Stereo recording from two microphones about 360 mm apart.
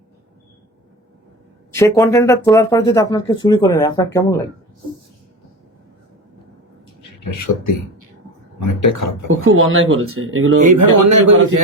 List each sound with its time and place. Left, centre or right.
1.7 s speech: centre
8.8 s speech: left
9.3 s speech: right
10.7 s a man's voice: right